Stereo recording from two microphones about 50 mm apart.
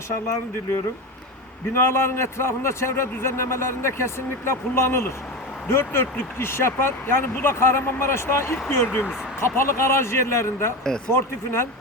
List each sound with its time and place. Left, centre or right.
1.9 s speech: left
9.4 s speech: left